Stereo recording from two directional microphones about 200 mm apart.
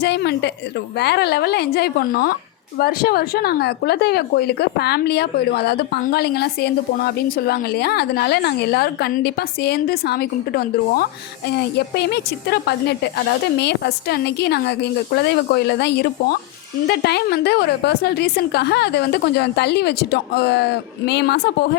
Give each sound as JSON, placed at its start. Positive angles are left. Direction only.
{"t": 0.0, "sound": "a woman's voice", "side_deg": 55}